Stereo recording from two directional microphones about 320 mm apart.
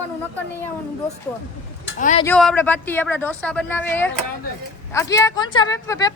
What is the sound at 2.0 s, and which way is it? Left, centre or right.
Speech, left.